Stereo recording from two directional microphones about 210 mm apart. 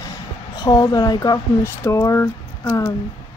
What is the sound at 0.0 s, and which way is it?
Speech, 15° left (ahead or behind).